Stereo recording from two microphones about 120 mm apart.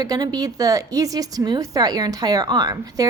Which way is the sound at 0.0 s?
30° right (ahead or behind).